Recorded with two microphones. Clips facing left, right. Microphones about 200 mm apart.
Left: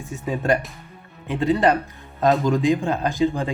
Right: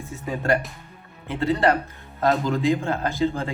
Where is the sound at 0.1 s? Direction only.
15° left (ahead or behind).